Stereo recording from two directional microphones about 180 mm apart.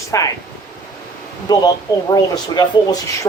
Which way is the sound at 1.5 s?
20° left (ahead or behind).